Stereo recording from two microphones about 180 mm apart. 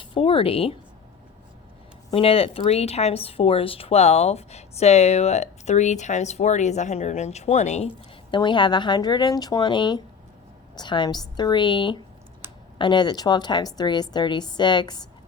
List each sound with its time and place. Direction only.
0.0 s speech: 30° left (ahead or behind)
2.0 s speech: 30° left (ahead or behind)
8.3 s a woman's voice: 25° left (ahead or behind)